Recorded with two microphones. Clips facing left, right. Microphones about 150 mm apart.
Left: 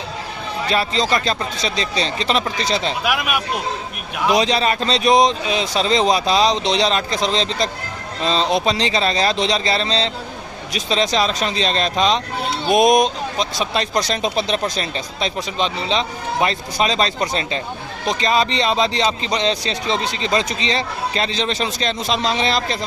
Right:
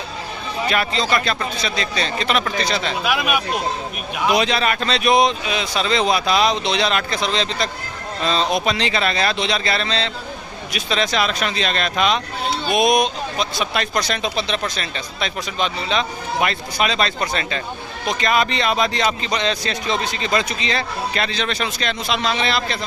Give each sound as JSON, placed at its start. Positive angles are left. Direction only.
{"t": 0.7, "sound": "a man's voice", "side_deg": 35}
{"t": 3.0, "sound": "speech", "side_deg": 5}
{"t": 4.4, "sound": "a man's voice", "side_deg": 35}
{"t": 12.7, "sound": "a man's voice", "side_deg": 45}
{"t": 18.1, "sound": "a man's voice", "side_deg": 30}